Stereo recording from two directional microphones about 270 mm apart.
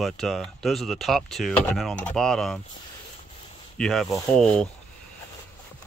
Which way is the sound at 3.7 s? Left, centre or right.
Centre.